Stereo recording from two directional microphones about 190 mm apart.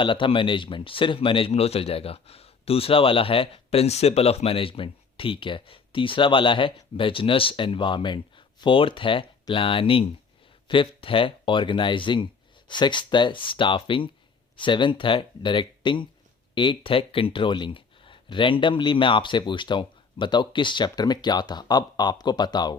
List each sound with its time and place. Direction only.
0.0 s speech: 25° left (ahead or behind)